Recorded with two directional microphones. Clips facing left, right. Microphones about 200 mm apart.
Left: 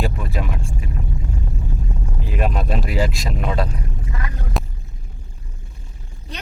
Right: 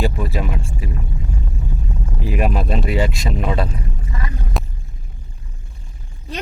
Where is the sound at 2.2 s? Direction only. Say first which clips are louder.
Right 3 dB; 10° right (ahead or behind).